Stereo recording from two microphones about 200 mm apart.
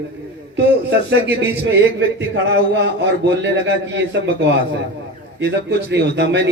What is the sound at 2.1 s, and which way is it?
A man's voice, 60° right (ahead or behind).